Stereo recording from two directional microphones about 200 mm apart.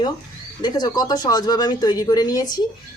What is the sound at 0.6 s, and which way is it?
Speech, 20° left (ahead or behind).